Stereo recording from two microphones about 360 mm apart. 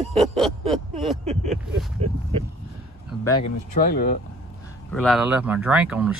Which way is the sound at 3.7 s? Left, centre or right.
Left.